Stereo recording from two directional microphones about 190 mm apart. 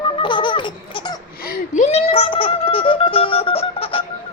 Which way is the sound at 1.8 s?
35° left (ahead or behind).